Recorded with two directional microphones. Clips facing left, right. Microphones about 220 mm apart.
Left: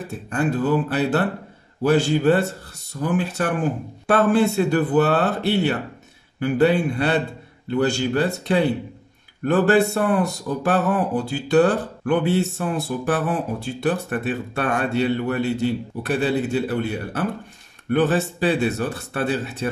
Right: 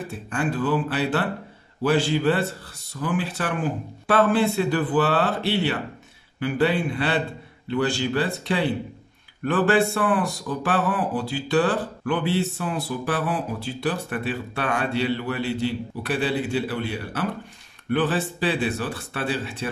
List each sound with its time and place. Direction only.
0.3 s speech: 40° left (ahead or behind)